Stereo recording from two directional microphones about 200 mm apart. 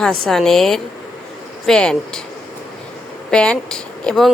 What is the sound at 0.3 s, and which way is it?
A woman's voice, centre (ahead or behind).